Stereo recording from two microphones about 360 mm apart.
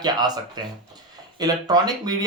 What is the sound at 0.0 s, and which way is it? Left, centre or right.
Speech, centre.